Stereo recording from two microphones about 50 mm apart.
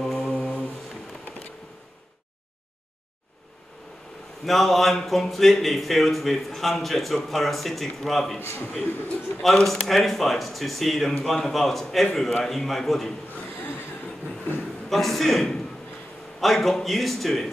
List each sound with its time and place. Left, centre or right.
0.0 s mantra: centre
0.3 s mantra: left
4.5 s a man's voice: centre
8.4 s a man's voice: left
9.4 s a man's voice: centre
14.9 s a man's voice: centre